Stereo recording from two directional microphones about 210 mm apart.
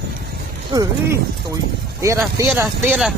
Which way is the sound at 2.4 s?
10° right (ahead or behind).